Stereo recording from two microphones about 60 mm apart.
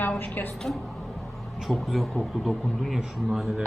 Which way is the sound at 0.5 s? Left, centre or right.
Centre.